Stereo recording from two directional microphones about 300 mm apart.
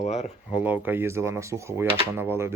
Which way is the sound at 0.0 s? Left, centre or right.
Left.